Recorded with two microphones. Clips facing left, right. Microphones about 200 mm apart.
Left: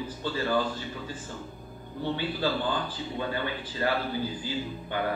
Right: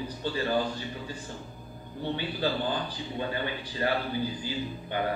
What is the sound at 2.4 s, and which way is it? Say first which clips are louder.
A man's voice: right 1 dB; 15° right (ahead or behind).